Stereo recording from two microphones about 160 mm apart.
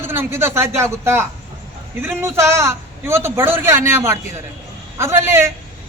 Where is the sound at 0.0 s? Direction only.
15° right (ahead or behind).